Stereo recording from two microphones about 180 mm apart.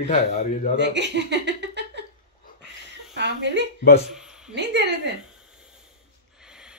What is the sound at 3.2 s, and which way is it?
Speech, 75° right (ahead or behind).